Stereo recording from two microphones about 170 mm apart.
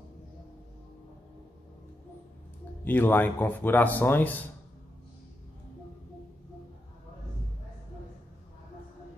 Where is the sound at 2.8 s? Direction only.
10° left (ahead or behind).